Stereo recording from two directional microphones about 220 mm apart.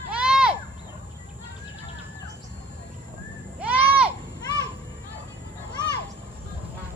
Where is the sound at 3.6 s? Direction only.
5° right (ahead or behind).